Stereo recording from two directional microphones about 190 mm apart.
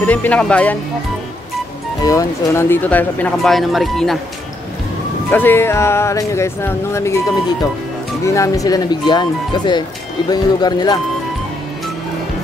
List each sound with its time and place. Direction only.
0.0 s speech: 10° left (ahead or behind)
2.0 s speech: 15° left (ahead or behind)
5.3 s speech: 10° left (ahead or behind)
8.3 s speech: 15° left (ahead or behind)